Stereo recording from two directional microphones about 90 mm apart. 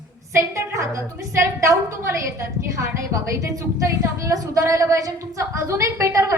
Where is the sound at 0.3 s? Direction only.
35° right (ahead or behind).